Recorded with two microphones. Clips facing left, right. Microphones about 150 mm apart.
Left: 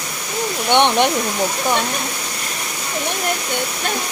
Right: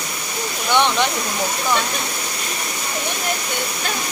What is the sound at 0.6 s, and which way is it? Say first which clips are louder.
Speech: left 3 dB; 20° left (ahead or behind).